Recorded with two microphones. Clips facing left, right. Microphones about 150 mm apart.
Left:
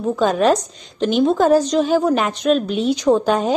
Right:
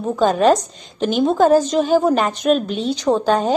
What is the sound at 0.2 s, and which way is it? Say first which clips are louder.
A woman's voice: right 2 dB; centre (ahead or behind).